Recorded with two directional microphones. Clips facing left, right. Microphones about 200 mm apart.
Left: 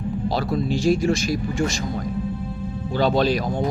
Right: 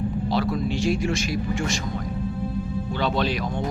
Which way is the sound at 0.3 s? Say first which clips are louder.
Left 2 dB; 40° left (ahead or behind).